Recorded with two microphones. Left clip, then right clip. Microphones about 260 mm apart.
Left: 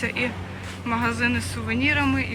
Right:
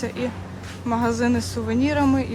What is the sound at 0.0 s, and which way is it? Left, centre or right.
Speech, centre.